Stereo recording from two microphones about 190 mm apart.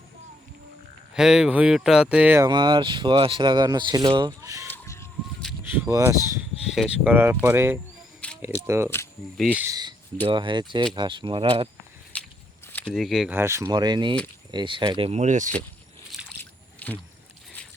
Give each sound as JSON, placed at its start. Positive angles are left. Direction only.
{"t": 1.1, "sound": "speech", "side_deg": -5}
{"t": 2.5, "sound": "speech", "side_deg": -25}
{"t": 4.7, "sound": "a sound", "side_deg": 15}
{"t": 5.6, "sound": "speech", "side_deg": -10}
{"t": 10.2, "sound": "speech", "side_deg": -25}
{"t": 12.9, "sound": "speech", "side_deg": 0}
{"t": 13.3, "sound": "speech", "side_deg": -15}
{"t": 16.4, "sound": "trickle", "side_deg": 10}